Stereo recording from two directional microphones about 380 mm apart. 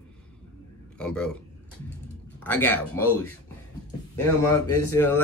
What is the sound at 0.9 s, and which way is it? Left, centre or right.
Speech, centre.